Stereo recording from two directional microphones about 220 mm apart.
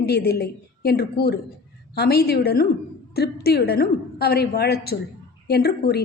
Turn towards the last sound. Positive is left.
turn(degrees=45)  # may be behind; listen again after turning